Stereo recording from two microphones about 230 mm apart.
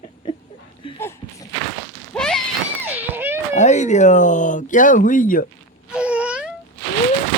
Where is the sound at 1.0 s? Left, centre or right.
Centre.